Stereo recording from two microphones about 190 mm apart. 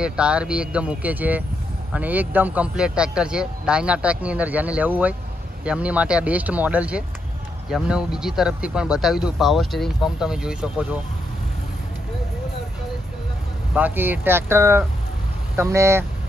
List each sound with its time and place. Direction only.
0.0 s speech: 5° right (ahead or behind)
13.7 s speech: 10° right (ahead or behind)